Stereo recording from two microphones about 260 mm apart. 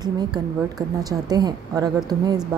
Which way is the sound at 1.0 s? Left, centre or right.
Centre.